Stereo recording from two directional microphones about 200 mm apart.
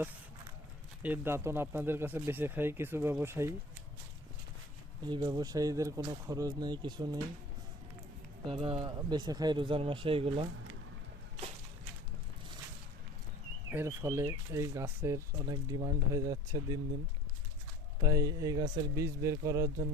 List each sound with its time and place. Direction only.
1.0 s speech: 10° right (ahead or behind)
5.0 s speech: 20° right (ahead or behind)
8.4 s speech: 30° right (ahead or behind)
13.7 s speech: 15° right (ahead or behind)
18.0 s speech: 15° right (ahead or behind)